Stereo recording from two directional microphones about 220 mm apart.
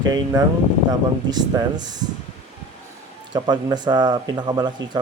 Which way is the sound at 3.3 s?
20° right (ahead or behind).